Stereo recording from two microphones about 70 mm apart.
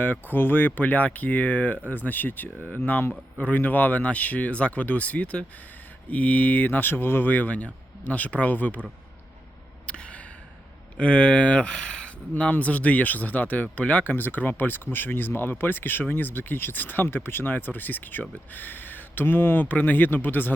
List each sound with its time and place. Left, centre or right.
0.0 s speech: left
9.8 s gasp: centre
10.9 s speech: centre
12.3 s speech: left